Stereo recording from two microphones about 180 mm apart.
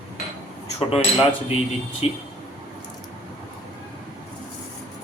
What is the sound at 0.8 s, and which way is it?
Speech, 35° left (ahead or behind).